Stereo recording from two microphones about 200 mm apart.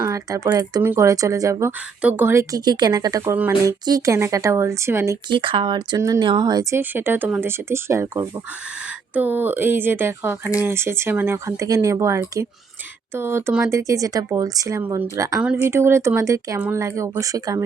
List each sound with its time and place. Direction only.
0.1 s speech: 15° right (ahead or behind)
5.3 s speech: 25° right (ahead or behind)